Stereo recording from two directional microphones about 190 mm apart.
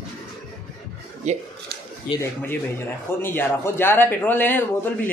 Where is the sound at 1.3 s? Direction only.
40° right (ahead or behind).